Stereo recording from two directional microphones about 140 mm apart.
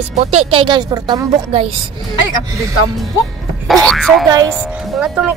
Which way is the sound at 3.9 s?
Centre (ahead or behind).